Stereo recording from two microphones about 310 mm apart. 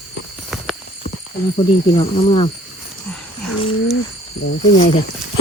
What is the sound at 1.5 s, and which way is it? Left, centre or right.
Speech, centre.